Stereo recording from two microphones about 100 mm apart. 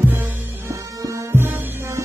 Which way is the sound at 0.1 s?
25° right (ahead or behind).